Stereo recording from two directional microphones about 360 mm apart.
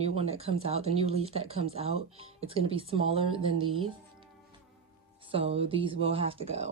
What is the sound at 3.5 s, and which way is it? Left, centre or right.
Speech, right.